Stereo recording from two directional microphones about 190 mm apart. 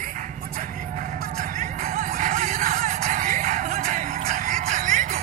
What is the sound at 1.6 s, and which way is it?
Music, 45° right (ahead or behind).